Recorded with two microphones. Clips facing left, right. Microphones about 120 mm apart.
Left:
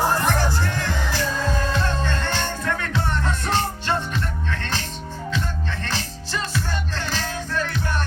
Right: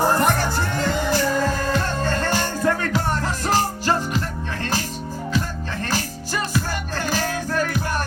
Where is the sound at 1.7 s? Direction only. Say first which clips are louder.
Right 2 dB; 45° right (ahead or behind).